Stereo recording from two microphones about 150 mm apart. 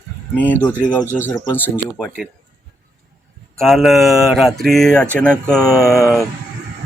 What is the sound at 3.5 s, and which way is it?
Speech, centre (ahead or behind).